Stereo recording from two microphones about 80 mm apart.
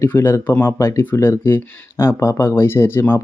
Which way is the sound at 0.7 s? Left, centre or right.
Left.